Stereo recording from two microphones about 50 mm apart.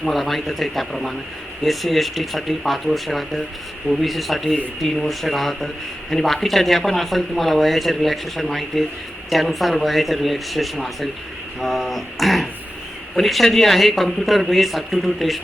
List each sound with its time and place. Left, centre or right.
0.0 s speech: centre